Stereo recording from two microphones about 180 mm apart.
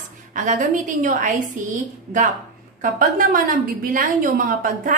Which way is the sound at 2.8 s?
50° right (ahead or behind).